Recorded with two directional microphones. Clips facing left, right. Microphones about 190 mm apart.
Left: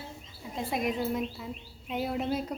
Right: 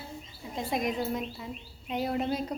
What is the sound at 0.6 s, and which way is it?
Speech, 5° left (ahead or behind).